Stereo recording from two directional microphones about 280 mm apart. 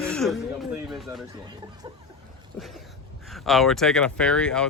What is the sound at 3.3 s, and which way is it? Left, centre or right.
Speech, centre.